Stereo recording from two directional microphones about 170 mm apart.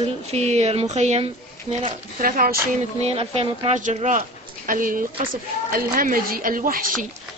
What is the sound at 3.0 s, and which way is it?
A man's voice, 35° right (ahead or behind).